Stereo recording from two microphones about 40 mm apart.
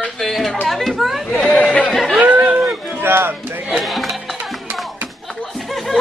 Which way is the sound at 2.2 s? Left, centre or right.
Right.